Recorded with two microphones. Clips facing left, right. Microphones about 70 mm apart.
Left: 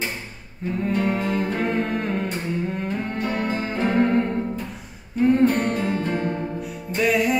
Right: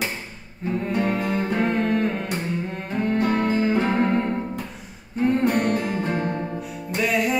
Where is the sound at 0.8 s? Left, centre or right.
Centre.